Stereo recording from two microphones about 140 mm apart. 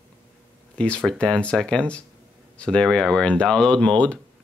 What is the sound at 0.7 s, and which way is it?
Speech, 10° left (ahead or behind).